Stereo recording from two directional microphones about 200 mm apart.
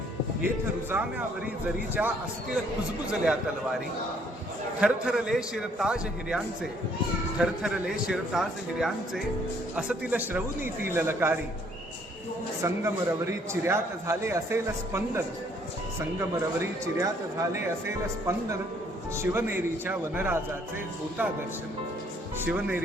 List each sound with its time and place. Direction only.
0.4 s a man's voice: 10° right (ahead or behind)
4.8 s a man's voice: 5° right (ahead or behind)
12.6 s a man's voice: 15° right (ahead or behind)
16.6 s a man's voice: 15° right (ahead or behind)
22.4 s a man's voice: 10° right (ahead or behind)